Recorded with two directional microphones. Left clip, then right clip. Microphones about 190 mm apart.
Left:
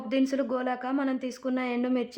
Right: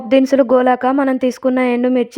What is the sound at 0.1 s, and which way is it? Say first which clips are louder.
A woman's voice: right 16 dB; 45° right (ahead or behind).